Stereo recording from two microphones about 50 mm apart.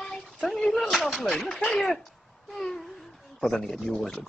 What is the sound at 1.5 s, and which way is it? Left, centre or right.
Speech, centre.